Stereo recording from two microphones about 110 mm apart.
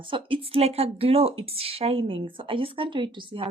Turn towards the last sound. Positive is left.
turn(degrees=-50)  # may be behind; listen again after turning